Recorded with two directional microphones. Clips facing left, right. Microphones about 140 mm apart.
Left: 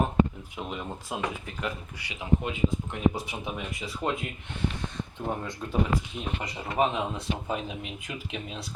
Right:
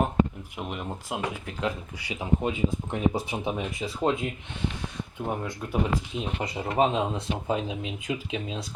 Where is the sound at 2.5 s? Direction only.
35° right (ahead or behind).